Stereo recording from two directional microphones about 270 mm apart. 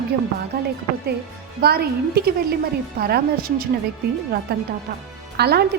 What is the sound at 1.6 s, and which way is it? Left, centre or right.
A woman's voice, right.